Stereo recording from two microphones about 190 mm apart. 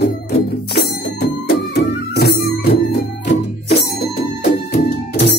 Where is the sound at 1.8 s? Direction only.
55° left (ahead or behind).